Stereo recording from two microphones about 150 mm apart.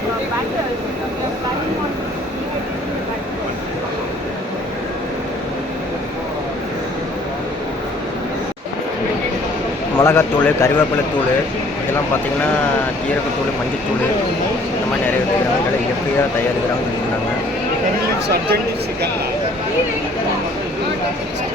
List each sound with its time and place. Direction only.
10.0 s a man's voice: 15° left (ahead or behind)